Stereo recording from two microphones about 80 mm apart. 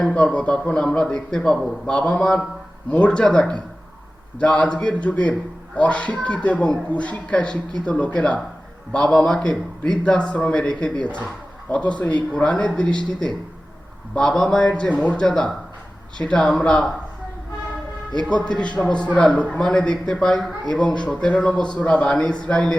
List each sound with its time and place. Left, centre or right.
0.0 s speech: centre
14.2 s speech: centre
18.3 s speech: centre